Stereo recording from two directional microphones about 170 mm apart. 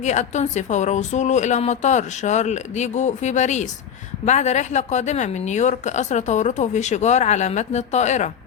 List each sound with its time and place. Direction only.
0.0 s a woman's voice: 45° left (ahead or behind)